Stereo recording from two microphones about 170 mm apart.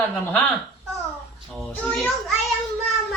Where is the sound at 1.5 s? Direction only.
5° left (ahead or behind).